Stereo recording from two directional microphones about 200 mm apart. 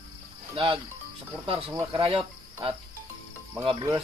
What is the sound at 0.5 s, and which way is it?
Speech, 25° right (ahead or behind).